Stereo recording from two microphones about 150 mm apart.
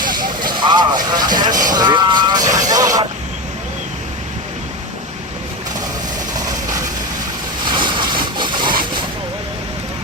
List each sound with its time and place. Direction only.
0.0 s a sound: 65° right (ahead or behind)
0.3 s vehicle: 30° right (ahead or behind)
7.6 s vehicle: 30° right (ahead or behind)